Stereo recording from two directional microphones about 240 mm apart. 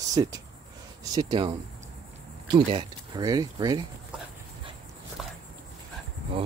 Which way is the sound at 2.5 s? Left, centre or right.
Centre.